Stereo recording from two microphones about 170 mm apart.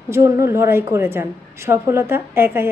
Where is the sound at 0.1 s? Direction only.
15° right (ahead or behind).